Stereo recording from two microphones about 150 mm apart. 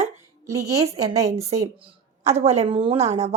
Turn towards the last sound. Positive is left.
turn(degrees=-45)  # may be behind; listen again after turning